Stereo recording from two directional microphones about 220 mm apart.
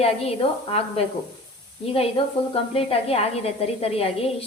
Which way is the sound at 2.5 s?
25° left (ahead or behind).